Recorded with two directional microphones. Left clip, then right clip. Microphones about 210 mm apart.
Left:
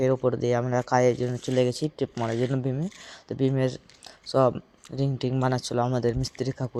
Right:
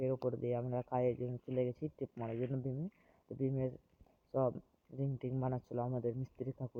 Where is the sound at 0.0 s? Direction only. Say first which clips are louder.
Left 13 dB; 25° left (ahead or behind).